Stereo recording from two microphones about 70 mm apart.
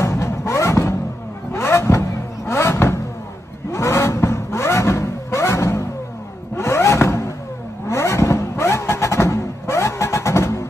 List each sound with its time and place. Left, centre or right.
0.0 s music: left
1.5 s vehicle: left
3.7 s music: left
6.5 s vehicle: left